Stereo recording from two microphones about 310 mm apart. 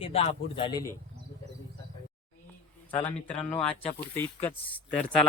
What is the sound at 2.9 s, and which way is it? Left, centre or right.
Speech, centre.